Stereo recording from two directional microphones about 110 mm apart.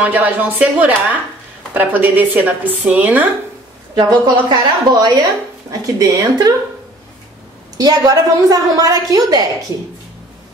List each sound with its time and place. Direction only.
0.0 s speech: 15° right (ahead or behind)
3.9 s a woman's voice: 40° right (ahead or behind)
7.7 s a woman's voice: 35° right (ahead or behind)